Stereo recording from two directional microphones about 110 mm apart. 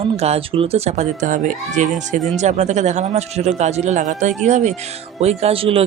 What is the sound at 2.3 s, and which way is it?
Speech, 90° right.